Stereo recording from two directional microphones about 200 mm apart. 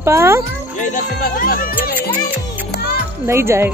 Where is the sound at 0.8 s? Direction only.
45° left (ahead or behind).